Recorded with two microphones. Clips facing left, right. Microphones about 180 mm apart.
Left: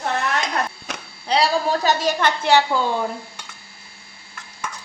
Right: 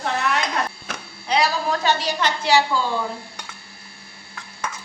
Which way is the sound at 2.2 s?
55° left (ahead or behind).